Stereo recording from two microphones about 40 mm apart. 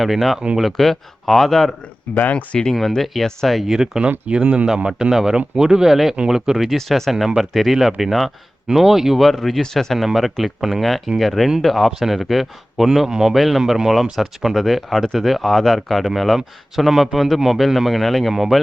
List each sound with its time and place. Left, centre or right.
0.0 s speech: centre
2.1 s speech: left
2.5 s speech: centre
3.2 s speech: centre
3.7 s speech: centre
4.3 s speech: right
6.7 s speech: centre
9.3 s speech: centre
11.9 s speech: centre
13.3 s speech: centre
13.6 s speech: centre